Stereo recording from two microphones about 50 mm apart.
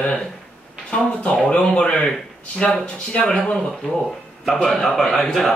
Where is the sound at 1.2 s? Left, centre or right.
Left.